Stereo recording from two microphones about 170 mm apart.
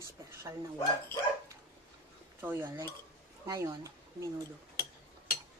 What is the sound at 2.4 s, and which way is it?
Speech, 15° right (ahead or behind).